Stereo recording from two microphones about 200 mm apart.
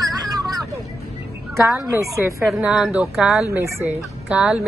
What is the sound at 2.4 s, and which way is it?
A woman's voice, 5° right (ahead or behind).